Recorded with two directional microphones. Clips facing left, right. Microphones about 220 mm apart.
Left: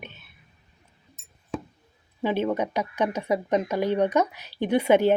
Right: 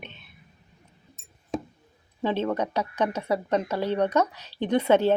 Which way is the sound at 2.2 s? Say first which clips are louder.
Left 1 dB; 10° left (ahead or behind).